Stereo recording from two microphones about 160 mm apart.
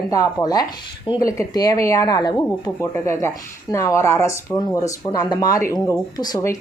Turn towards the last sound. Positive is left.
turn(degrees=20)  # may be behind; listen again after turning